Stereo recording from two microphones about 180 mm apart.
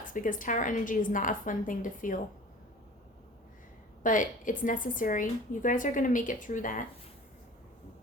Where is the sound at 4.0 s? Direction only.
45° left (ahead or behind).